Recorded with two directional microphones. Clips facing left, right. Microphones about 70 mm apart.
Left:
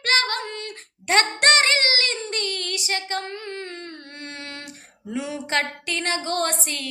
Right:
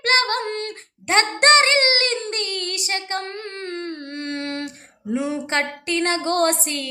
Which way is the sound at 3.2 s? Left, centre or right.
Right.